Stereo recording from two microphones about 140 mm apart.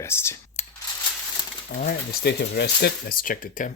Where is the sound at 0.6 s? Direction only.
55° left (ahead or behind).